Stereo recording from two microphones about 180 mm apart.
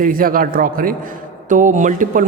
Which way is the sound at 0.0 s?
50° right (ahead or behind).